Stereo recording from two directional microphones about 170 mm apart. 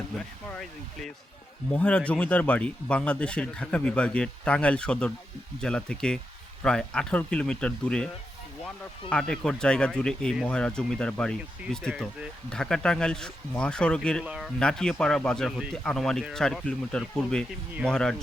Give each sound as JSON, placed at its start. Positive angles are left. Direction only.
{"t": 0.5, "sound": "speech", "side_deg": 0}
{"t": 14.3, "sound": "speech", "side_deg": -5}